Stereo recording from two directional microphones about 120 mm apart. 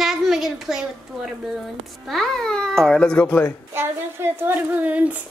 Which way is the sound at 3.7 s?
20° right (ahead or behind).